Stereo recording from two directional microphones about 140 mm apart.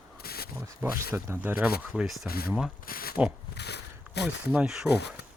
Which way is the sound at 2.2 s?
90° left.